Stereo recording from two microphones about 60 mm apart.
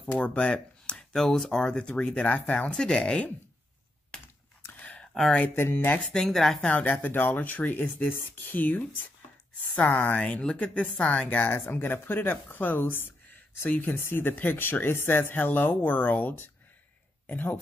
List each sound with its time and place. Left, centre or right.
0.0 s speech: left
2.2 s speech: left
4.6 s a sound: left
5.6 s speech: left
6.0 s speech: centre
6.6 s speech: left